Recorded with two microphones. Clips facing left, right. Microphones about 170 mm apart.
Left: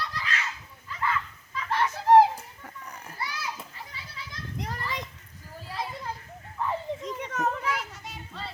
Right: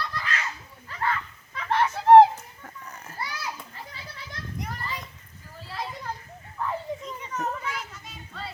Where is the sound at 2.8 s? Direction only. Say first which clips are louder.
Even; 15° left (ahead or behind).